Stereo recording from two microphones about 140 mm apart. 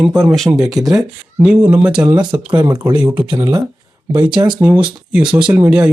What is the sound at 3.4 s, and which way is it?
Speech, 30° right (ahead or behind).